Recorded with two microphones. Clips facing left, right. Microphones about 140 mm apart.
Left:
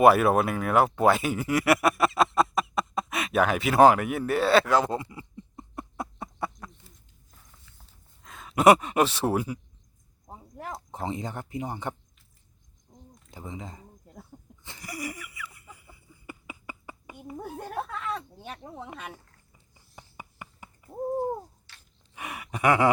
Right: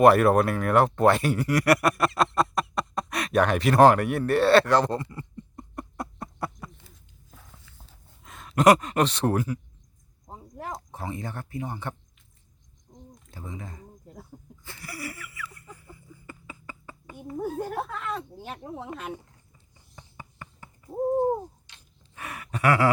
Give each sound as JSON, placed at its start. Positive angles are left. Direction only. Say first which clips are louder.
{"t": 0.0, "sound": "speech", "louder": "right 1 dB", "side_deg": 0}
{"t": 8.2, "sound": "speech", "louder": "even", "side_deg": 0}
{"t": 10.9, "sound": "speech", "louder": "left 6 dB", "side_deg": 20}
{"t": 12.9, "sound": "a sound", "louder": "right 4 dB", "side_deg": 5}
{"t": 13.3, "sound": "speech", "louder": "left 1 dB", "side_deg": 20}
{"t": 14.6, "sound": "a sound", "louder": "left 2 dB", "side_deg": 20}
{"t": 17.6, "sound": "speech", "louder": "right 3 dB", "side_deg": 0}
{"t": 20.0, "sound": "a sound", "louder": "even", "side_deg": 15}
{"t": 21.7, "sound": "gasp", "louder": "even", "side_deg": -20}
{"t": 22.1, "sound": "gasp", "louder": "right 1 dB", "side_deg": 10}